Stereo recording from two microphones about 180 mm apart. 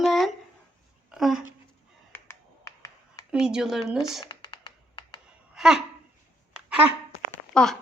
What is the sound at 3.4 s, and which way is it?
Speech, 5° right (ahead or behind).